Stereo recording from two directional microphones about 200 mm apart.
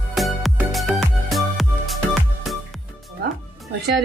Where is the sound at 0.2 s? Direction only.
Centre (ahead or behind).